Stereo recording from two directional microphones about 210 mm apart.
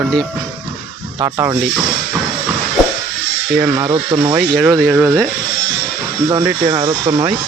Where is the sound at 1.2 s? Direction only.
15° right (ahead or behind).